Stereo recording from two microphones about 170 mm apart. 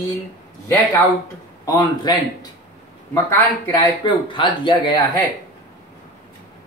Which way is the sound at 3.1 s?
15° left (ahead or behind).